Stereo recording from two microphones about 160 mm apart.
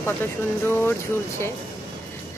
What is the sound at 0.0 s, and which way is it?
Speech, 15° left (ahead or behind).